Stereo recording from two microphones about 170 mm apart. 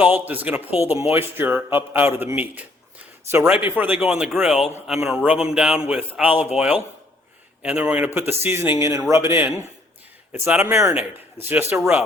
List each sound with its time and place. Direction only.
0.0 s speech: 10° right (ahead or behind)